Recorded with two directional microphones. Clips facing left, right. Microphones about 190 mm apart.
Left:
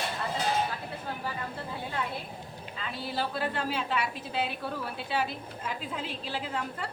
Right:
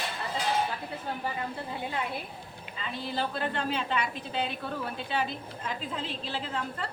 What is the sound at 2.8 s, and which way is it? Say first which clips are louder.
A woman's voice: right 1 dB; 5° left (ahead or behind).